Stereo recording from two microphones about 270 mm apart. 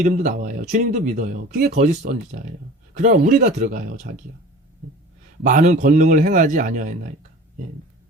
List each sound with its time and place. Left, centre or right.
0.0 s speech: right
5.4 s speech: right